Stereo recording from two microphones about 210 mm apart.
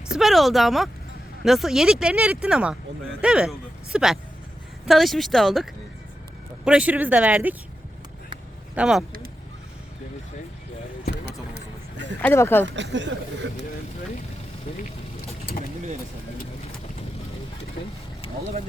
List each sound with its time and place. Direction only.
0.1 s speech: centre (ahead or behind)
6.7 s speech: 5° right (ahead or behind)
8.7 s speech: 5° right (ahead or behind)
11.1 s vehicle: 55° right (ahead or behind)
12.2 s speech: 10° left (ahead or behind)
12.6 s speech: 60° right (ahead or behind)